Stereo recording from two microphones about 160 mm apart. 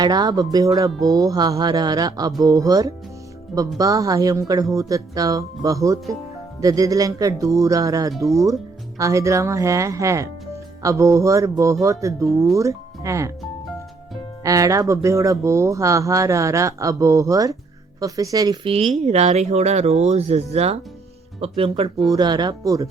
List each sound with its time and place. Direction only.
0.0 s speech: 25° right (ahead or behind)
14.4 s speech: 20° right (ahead or behind)
18.6 s speech: 35° right (ahead or behind)